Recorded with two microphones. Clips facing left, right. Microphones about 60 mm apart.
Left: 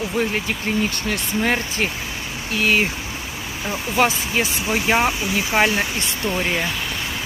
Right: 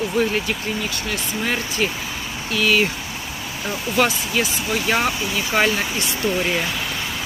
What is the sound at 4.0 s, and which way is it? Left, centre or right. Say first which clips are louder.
Speech: left 1 dB; left.